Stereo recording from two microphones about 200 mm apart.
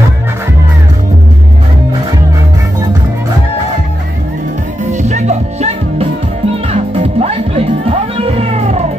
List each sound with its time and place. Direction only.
4.9 s music: 35° right (ahead or behind)